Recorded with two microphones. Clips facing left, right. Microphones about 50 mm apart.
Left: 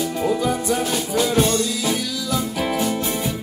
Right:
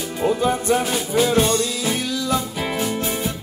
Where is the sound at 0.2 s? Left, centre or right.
Right.